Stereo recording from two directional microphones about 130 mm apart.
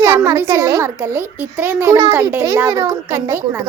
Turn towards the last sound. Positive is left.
turn(degrees=-20)  # may be behind; listen again after turning